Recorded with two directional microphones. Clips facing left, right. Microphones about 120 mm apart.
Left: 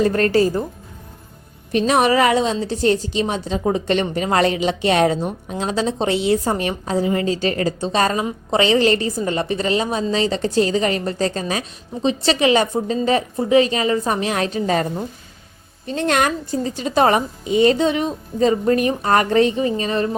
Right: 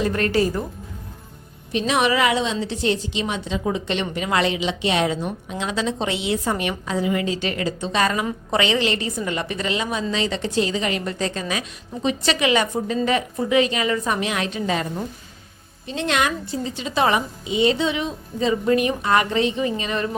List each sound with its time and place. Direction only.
0.0 s a woman's voice: 35° left (ahead or behind)
1.7 s a woman's voice: 40° left (ahead or behind)
15.9 s a woman's voice: 45° left (ahead or behind)